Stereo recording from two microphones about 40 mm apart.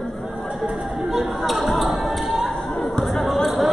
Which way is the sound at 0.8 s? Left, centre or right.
Centre.